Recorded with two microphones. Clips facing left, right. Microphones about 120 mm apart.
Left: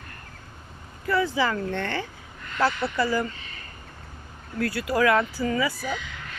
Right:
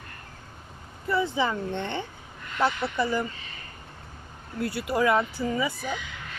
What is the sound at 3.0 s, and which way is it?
Speech, 90° left.